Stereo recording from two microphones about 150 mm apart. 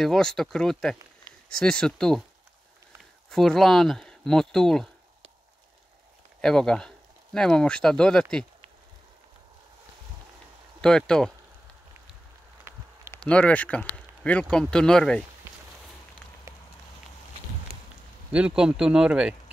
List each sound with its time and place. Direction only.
0.0 s speech: 5° left (ahead or behind)
3.3 s speech: centre (ahead or behind)
6.4 s speech: 5° left (ahead or behind)
10.8 s speech: 5° left (ahead or behind)
12.7 s a sound: 15° right (ahead or behind)
13.1 s speech: 10° left (ahead or behind)
17.7 s a sound: 90° left
18.3 s speech: 5° right (ahead or behind)